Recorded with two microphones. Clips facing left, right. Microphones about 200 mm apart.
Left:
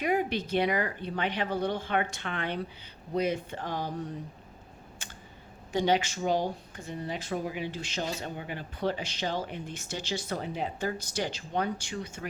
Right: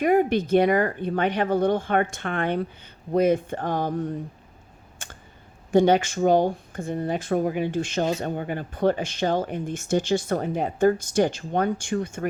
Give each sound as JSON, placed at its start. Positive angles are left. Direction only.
{"t": 0.0, "sound": "speech", "side_deg": -50}
{"t": 5.0, "sound": "a sound", "side_deg": -50}
{"t": 5.7, "sound": "speech", "side_deg": -50}